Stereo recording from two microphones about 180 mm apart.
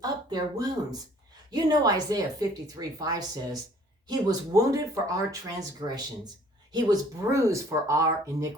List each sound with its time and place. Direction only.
0.0 s speech: 20° right (ahead or behind)